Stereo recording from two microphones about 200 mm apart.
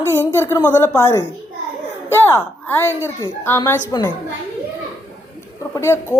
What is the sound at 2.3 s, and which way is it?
A woman's voice, 10° left (ahead or behind).